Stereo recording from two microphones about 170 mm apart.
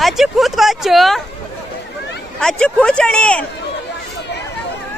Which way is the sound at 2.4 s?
5° left (ahead or behind).